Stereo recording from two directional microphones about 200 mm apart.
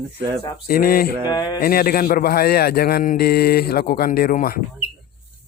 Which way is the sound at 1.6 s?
45° left (ahead or behind).